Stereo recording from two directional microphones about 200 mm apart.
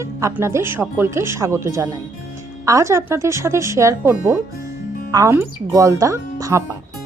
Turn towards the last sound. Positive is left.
turn(degrees=-15)  # may be behind; listen again after turning